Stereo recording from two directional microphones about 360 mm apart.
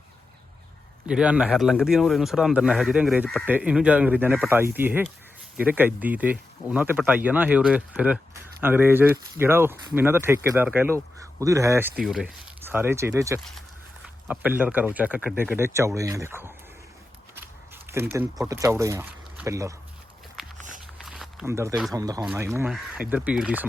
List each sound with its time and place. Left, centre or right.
1.0 s speech: centre
17.8 s speech: centre
20.6 s a sound: right
21.0 s speech: centre